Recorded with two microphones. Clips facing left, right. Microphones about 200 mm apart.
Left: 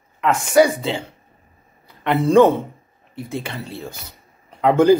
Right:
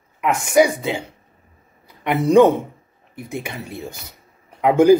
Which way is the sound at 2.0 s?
15° right (ahead or behind).